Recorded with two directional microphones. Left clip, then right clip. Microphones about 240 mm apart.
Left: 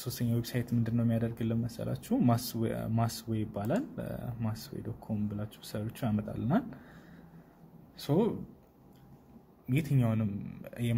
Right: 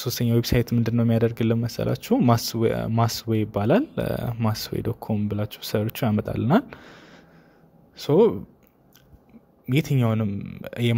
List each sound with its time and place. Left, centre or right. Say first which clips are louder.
0.0 s speech: right 12 dB; right
9.7 s speech: right 9 dB; right